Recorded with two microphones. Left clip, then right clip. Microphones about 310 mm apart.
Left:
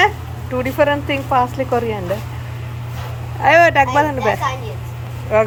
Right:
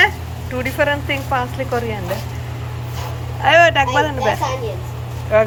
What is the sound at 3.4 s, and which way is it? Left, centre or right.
Speech, left.